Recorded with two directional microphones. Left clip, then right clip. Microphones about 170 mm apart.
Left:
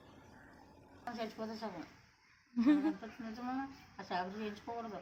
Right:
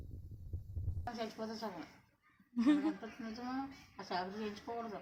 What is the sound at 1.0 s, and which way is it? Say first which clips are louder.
Speech: even; 10° left (ahead or behind).